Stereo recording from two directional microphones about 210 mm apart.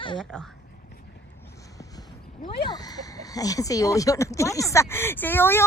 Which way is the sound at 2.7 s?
20° left (ahead or behind).